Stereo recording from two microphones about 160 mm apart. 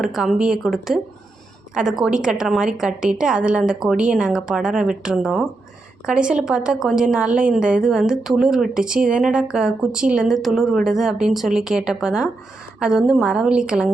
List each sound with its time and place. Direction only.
0.0 s a woman's voice: centre (ahead or behind)